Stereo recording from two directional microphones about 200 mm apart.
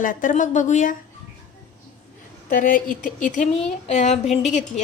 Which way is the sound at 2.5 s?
45° left (ahead or behind).